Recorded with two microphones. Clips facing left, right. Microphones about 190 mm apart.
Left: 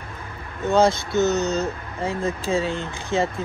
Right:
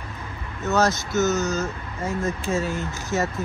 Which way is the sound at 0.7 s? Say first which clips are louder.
Left 3 dB; 30° left (ahead or behind).